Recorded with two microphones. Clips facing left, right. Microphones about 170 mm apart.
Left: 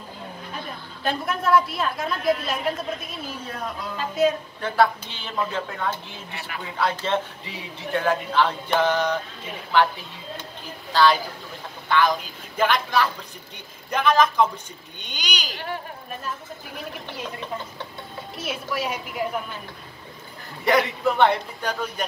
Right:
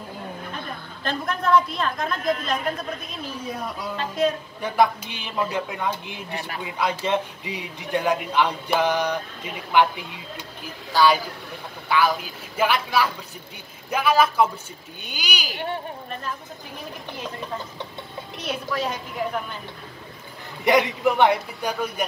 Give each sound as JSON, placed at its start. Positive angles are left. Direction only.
{"t": 1.0, "sound": "a woman's voice", "side_deg": 5}
{"t": 3.4, "sound": "a man's voice", "side_deg": -10}
{"t": 3.9, "sound": "speech", "side_deg": 5}
{"t": 4.6, "sound": "a man's voice", "side_deg": -15}
{"t": 6.3, "sound": "speech", "side_deg": -40}
{"t": 6.6, "sound": "a man's voice", "side_deg": -10}
{"t": 18.4, "sound": "a woman's voice", "side_deg": 5}
{"t": 20.6, "sound": "a man's voice", "side_deg": -20}